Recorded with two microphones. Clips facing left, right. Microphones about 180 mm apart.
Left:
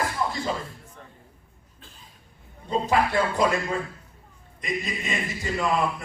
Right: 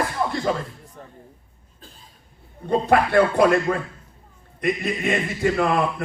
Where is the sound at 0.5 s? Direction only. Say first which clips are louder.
Right 6 dB; 60° right (ahead or behind).